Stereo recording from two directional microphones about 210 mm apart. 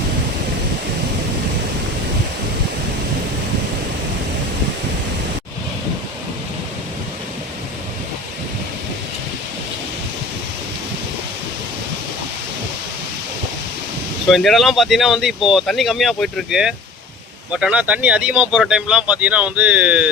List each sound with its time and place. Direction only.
14.3 s speech: centre (ahead or behind)